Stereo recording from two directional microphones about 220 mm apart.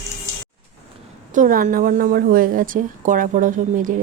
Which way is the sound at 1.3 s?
40° right (ahead or behind).